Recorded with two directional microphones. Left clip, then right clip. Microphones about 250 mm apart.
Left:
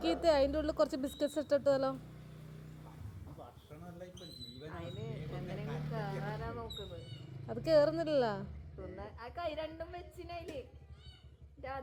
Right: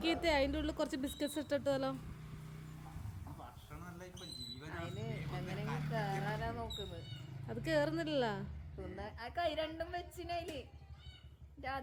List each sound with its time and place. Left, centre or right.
0.0 s speech: centre
4.6 s vehicle: right
7.4 s speech: centre
9.0 s a woman's voice: right